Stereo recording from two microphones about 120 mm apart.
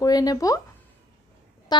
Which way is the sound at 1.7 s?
35° left (ahead or behind).